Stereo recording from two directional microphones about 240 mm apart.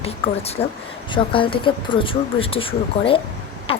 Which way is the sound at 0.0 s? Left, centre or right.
Left.